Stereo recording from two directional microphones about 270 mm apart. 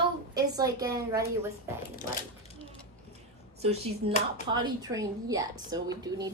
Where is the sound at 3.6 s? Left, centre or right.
Right.